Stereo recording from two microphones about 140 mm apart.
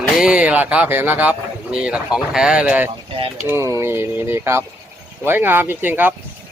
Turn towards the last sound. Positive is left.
turn(degrees=-15)  # may be behind; listen again after turning